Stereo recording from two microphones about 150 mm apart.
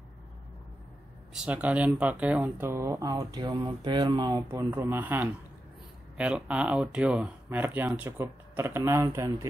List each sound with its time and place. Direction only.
1.3 s speech: 5° right (ahead or behind); by 4.5 s 25° right (ahead or behind)
4.5 s speech: 15° right (ahead or behind)